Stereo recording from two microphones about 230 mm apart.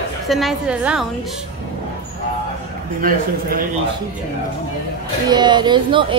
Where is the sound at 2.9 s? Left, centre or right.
Right.